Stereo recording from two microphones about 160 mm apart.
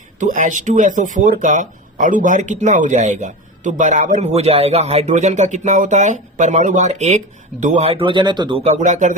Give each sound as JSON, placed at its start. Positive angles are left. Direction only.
{"t": 0.2, "sound": "speech", "side_deg": -55}
{"t": 8.8, "sound": "speech", "side_deg": -50}